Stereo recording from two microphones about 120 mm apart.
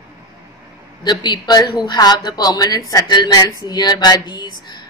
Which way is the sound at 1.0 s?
35° left (ahead or behind).